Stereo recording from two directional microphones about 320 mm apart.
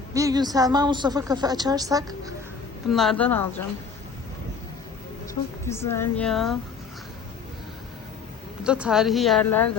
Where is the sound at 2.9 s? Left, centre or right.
Centre.